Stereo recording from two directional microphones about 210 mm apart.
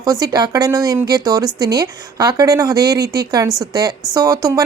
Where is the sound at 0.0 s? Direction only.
15° right (ahead or behind).